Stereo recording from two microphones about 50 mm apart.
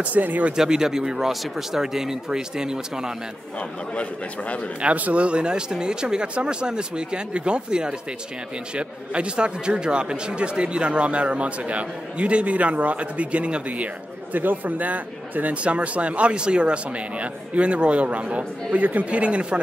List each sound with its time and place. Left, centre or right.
0.0 s speech: right
0.6 s speech: centre
3.9 s a man's voice: left
4.8 s speech: right